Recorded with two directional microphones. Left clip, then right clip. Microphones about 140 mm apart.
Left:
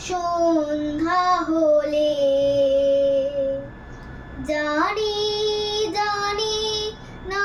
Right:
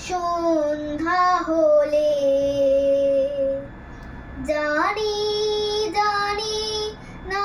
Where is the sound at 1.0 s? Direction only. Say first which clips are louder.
Right 1 dB; 25° left (ahead or behind).